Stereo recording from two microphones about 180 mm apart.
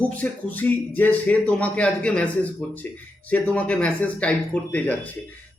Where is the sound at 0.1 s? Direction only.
10° left (ahead or behind).